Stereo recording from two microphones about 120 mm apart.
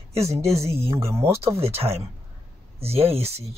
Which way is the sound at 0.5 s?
60° right (ahead or behind).